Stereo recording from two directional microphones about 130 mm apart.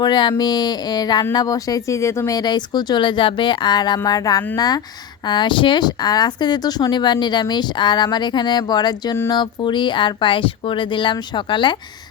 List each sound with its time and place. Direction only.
0.0 s speech: 35° left (ahead or behind)